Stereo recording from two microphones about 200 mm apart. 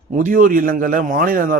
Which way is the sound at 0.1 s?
40° right (ahead or behind).